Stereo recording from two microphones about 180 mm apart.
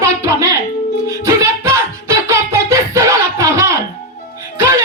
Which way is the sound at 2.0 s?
15° right (ahead or behind).